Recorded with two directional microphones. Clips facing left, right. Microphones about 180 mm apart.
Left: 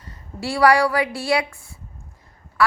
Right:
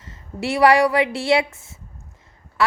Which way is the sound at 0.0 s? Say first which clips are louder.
Right 3 dB; 20° right (ahead or behind).